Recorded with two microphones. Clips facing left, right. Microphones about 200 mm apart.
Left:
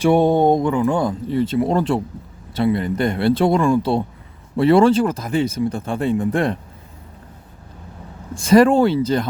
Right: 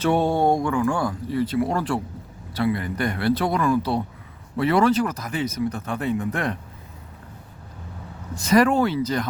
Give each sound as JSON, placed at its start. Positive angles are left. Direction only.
{"t": 0.0, "sound": "speech", "side_deg": 15}
{"t": 8.4, "sound": "speech", "side_deg": 30}